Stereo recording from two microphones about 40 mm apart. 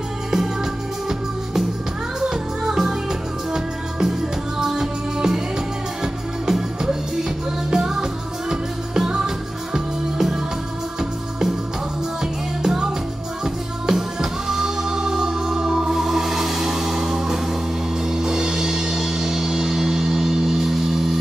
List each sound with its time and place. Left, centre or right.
2.1 s music: centre
6.4 s music: centre